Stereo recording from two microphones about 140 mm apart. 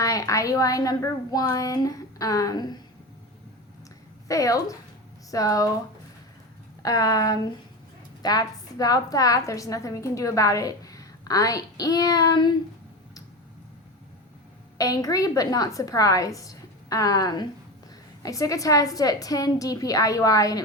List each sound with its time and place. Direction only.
0.0 s a woman's voice: 25° left (ahead or behind)
4.3 s a woman's voice: 25° left (ahead or behind)
6.8 s a woman's voice: 25° left (ahead or behind)
14.8 s a woman's voice: 25° left (ahead or behind)